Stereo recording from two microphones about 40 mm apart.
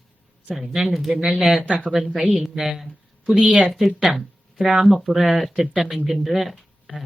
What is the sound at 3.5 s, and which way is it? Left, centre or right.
Speech, right.